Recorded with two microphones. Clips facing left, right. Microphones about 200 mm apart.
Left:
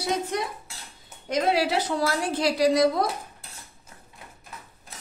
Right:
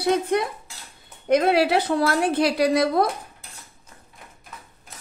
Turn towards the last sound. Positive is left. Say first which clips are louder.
# right 1 dB
turn(degrees=-60)  # may be behind; listen again after turning